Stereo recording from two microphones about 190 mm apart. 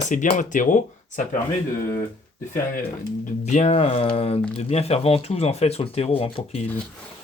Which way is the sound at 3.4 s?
35° left (ahead or behind).